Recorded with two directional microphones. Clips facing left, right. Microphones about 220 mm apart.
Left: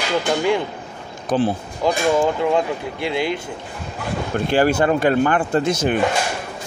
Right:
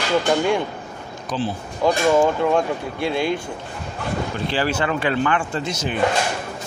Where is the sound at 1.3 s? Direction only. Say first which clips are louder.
Left 6 dB; 55° left (ahead or behind).